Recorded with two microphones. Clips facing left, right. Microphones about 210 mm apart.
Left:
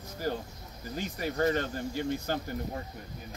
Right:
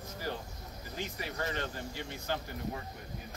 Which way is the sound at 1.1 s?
45° left (ahead or behind).